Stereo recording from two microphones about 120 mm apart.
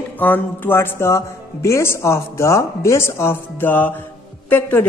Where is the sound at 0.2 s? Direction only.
15° left (ahead or behind).